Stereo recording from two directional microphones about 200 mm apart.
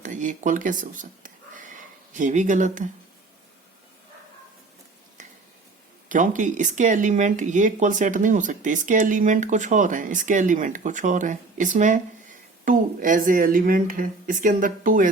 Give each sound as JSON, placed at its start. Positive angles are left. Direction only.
{"t": 0.0, "sound": "speech", "side_deg": -40}
{"t": 6.1, "sound": "speech", "side_deg": -40}